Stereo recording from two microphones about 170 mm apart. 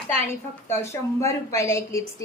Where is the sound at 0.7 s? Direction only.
15° left (ahead or behind).